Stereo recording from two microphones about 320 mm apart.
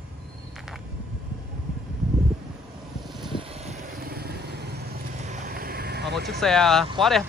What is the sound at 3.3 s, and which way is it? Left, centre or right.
Vehicle, centre.